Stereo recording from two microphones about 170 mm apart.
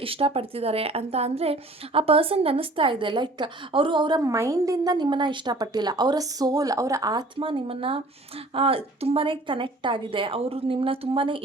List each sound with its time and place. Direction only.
0.0 s a woman's voice: 35° right (ahead or behind)